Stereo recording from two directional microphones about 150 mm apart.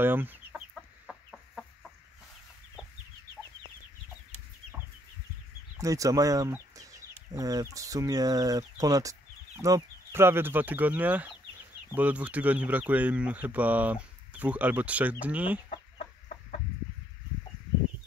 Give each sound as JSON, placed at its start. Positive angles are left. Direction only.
{"t": 0.0, "sound": "speech", "side_deg": -15}
{"t": 0.7, "sound": "chicken", "side_deg": 0}
{"t": 5.8, "sound": "speech", "side_deg": -20}